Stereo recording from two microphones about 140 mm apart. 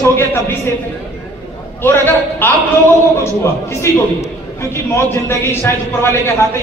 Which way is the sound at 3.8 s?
20° left (ahead or behind).